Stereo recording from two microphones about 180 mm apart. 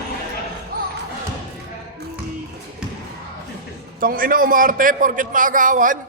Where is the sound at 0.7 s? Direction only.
55° right (ahead or behind).